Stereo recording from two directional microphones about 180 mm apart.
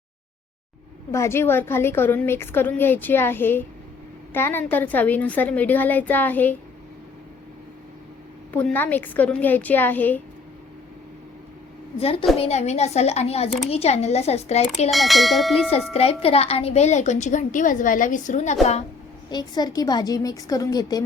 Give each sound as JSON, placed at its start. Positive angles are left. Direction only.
{"t": 1.1, "sound": "a woman's voice", "side_deg": 15}
{"t": 8.5, "sound": "a woman's voice", "side_deg": 10}
{"t": 11.9, "sound": "a woman's voice", "side_deg": 35}
{"t": 14.8, "sound": "speech", "side_deg": 0}
{"t": 15.9, "sound": "a woman's voice", "side_deg": 35}
{"t": 19.3, "sound": "a woman's voice", "side_deg": 25}